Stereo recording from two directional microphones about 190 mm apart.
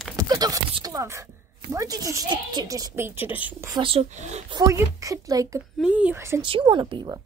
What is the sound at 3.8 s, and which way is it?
Speech, 30° right (ahead or behind).